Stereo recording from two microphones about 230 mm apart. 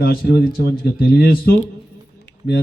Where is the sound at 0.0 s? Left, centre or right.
Left.